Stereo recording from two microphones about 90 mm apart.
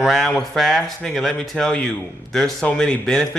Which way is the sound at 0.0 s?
Centre (ahead or behind).